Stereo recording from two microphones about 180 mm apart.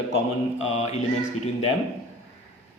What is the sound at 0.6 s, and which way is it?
Speech, 40° left (ahead or behind).